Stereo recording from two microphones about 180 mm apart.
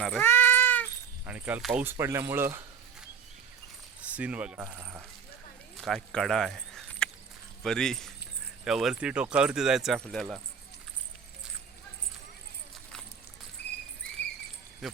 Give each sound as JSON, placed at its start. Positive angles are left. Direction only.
{"t": 0.0, "sound": "cat", "side_deg": 10}
{"t": 1.2, "sound": "speech", "side_deg": -10}
{"t": 4.0, "sound": "speech", "side_deg": -10}
{"t": 5.7, "sound": "a sound", "side_deg": 0}
{"t": 7.6, "sound": "speech", "side_deg": 5}
{"t": 13.6, "sound": "rodents", "side_deg": 70}